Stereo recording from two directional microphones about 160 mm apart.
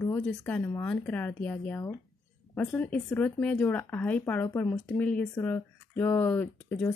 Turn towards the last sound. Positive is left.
turn(degrees=10)  # may be behind; listen again after turning